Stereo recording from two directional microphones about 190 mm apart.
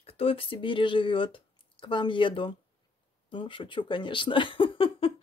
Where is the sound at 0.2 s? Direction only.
30° left (ahead or behind).